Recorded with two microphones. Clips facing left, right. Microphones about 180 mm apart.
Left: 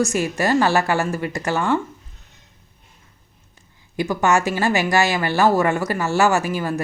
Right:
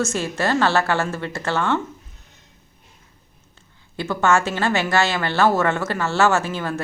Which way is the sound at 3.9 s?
15° left (ahead or behind).